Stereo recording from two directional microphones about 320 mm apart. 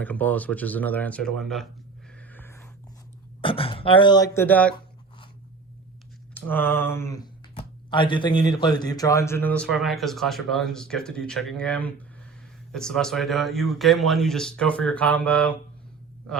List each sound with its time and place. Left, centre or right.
0.0 s speech: centre
2.1 s a sound: centre
3.4 s speech: centre
6.3 s speech: centre